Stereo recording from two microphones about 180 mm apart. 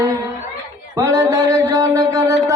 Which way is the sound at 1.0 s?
20° right (ahead or behind).